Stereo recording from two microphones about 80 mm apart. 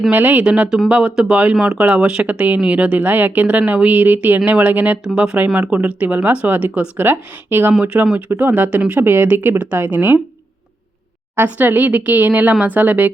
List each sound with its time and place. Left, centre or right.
0.1 s speech: right
11.3 s speech: right